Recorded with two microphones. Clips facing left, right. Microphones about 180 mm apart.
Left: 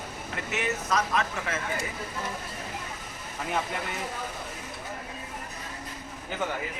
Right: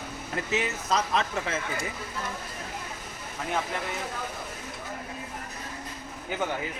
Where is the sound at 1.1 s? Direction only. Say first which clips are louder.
Right 1 dB; 30° right (ahead or behind).